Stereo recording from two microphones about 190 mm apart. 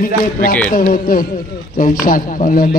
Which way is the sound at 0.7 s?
45° left (ahead or behind).